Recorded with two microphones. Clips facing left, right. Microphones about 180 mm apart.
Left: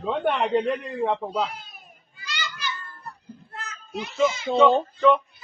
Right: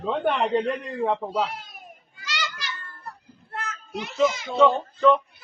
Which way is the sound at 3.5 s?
50° right (ahead or behind).